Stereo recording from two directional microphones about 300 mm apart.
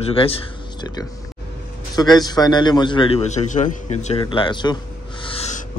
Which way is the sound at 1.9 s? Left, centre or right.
Centre.